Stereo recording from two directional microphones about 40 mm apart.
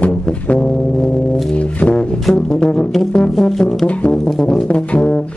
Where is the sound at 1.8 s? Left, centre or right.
Left; by 3.7 s centre.